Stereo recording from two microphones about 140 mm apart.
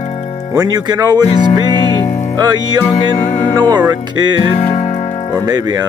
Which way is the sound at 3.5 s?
30° right (ahead or behind).